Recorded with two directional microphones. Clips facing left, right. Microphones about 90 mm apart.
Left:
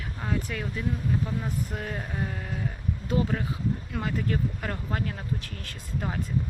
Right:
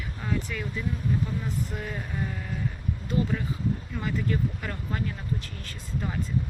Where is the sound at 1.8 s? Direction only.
45° left (ahead or behind).